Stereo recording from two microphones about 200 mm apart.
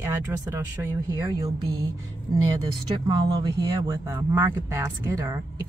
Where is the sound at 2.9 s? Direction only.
20° right (ahead or behind).